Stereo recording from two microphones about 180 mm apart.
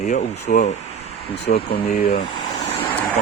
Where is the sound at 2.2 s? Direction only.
25° left (ahead or behind).